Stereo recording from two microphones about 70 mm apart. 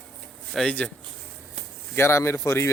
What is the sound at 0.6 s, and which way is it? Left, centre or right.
Speech, centre.